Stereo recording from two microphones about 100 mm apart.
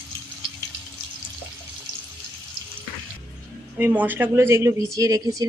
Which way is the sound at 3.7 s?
15° right (ahead or behind).